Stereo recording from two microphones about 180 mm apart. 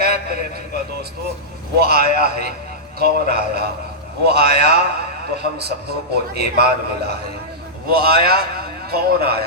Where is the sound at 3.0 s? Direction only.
60° right (ahead or behind).